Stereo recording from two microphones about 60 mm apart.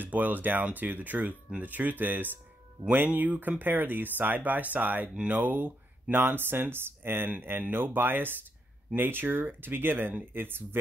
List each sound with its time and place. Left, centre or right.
0.0 s speech: right
5.0 s speech: centre
5.4 s speech: right